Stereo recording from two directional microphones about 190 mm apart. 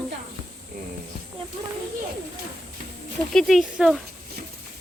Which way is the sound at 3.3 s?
Centre (ahead or behind).